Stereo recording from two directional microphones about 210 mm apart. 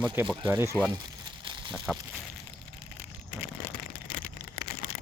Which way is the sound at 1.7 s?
5° right (ahead or behind).